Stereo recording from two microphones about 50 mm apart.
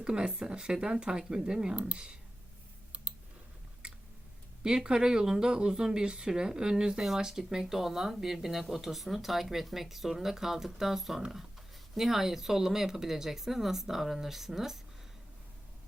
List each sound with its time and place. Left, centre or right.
0.0 s speech: centre
2.9 s a sound: right
3.8 s typing: centre
4.6 s speech: centre